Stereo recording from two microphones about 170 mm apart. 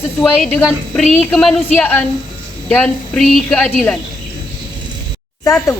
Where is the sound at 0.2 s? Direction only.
Centre (ahead or behind).